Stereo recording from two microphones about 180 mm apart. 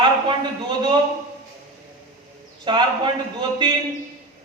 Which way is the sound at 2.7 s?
25° right (ahead or behind).